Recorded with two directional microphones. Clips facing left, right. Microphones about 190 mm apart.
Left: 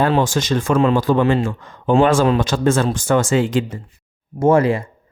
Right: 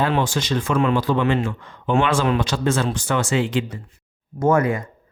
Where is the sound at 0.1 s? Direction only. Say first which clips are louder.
Left 4 dB; 45° left (ahead or behind).